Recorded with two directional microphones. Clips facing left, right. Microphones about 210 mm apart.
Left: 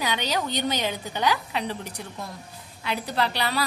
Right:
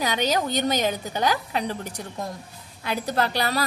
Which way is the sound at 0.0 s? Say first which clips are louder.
Right 3 dB; 45° right (ahead or behind).